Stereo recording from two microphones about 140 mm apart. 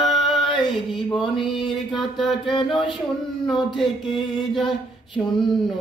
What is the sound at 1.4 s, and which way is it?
Music, 35° left (ahead or behind).